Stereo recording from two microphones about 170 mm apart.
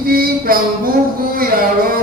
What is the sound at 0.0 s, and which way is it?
Mantra, 60° right (ahead or behind).